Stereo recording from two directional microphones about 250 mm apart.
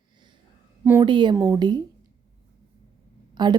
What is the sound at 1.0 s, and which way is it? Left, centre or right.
Speech, centre.